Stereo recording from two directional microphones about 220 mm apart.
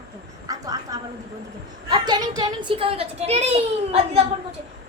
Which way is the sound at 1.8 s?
20° right (ahead or behind).